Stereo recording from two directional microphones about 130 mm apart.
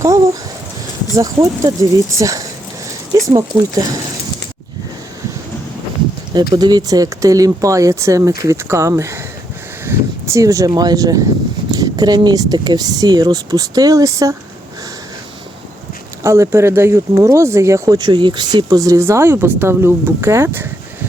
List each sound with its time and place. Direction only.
1.1 s speech: 25° right (ahead or behind)
6.5 s speech: 35° right (ahead or behind)
16.2 s speech: 20° right (ahead or behind)